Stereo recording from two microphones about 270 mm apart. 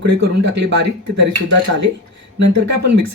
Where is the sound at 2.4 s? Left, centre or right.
Right.